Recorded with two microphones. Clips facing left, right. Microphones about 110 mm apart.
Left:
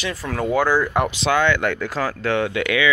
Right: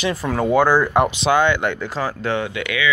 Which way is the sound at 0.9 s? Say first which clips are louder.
Right 4 dB; centre (ahead or behind).